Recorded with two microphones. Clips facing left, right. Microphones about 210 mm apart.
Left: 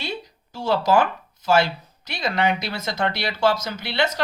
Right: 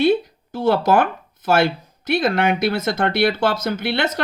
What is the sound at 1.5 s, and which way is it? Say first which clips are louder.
Speech: right 2 dB; 55° right (ahead or behind).